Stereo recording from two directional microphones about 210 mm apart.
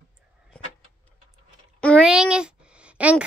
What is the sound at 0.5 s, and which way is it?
Vehicle, 5° left (ahead or behind).